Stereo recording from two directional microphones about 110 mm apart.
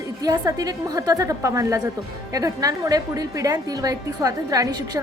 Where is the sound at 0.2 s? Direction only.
35° right (ahead or behind).